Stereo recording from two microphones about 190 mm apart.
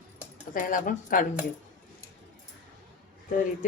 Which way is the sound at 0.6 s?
45° left (ahead or behind).